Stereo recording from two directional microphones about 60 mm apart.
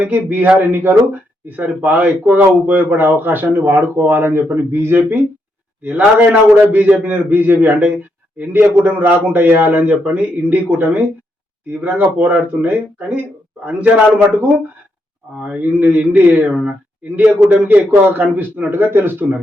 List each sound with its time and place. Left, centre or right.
0.0 s speech: right
5.8 s a man's voice: right
15.4 s a man's voice: right